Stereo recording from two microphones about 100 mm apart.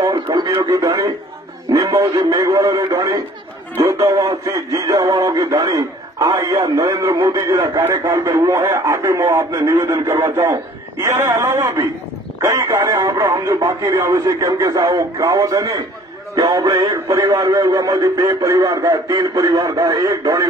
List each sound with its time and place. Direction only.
0.0 s speech: 40° right (ahead or behind)